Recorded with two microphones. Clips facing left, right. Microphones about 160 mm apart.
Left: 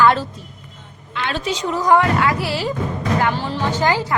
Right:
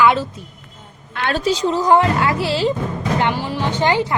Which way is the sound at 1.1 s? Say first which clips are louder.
Right 3 dB; 50° right (ahead or behind).